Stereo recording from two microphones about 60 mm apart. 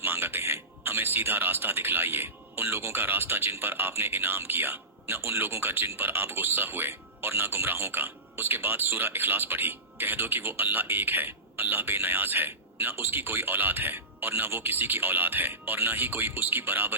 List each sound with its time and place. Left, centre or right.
0.0 s a man's voice: right